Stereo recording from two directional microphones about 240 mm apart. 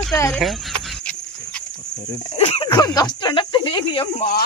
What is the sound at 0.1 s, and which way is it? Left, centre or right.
Speech, centre.